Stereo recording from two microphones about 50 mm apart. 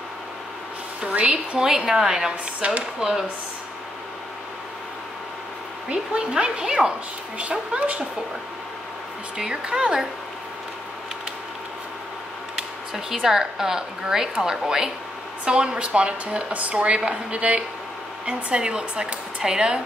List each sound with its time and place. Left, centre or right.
1.0 s a woman's voice: right
1.6 s speech: centre
5.9 s speech: centre
7.5 s a woman's voice: right
9.4 s speech: centre
12.9 s a woman's voice: centre